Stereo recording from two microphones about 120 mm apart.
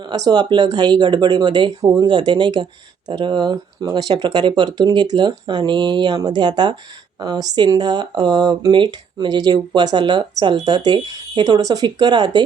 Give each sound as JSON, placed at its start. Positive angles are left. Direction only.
{"t": 0.3, "sound": "speech", "side_deg": -35}